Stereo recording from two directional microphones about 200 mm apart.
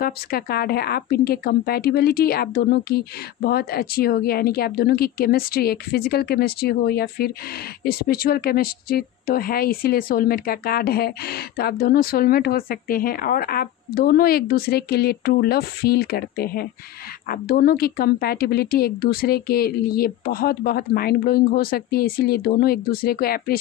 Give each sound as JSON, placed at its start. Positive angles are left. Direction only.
{"t": 0.0, "sound": "speech", "side_deg": 50}